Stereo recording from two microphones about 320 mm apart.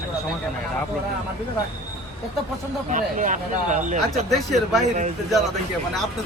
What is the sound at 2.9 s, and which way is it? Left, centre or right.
Speech, right.